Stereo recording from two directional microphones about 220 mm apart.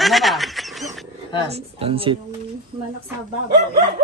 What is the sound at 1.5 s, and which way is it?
Speech, 25° right (ahead or behind).